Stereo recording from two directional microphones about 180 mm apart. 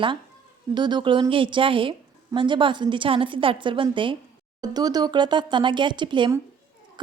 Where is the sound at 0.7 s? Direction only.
25° right (ahead or behind).